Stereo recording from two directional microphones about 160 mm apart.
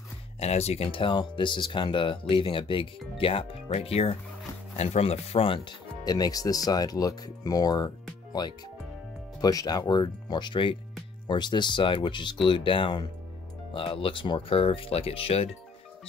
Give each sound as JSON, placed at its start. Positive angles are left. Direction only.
{"t": 0.4, "sound": "speech", "side_deg": 40}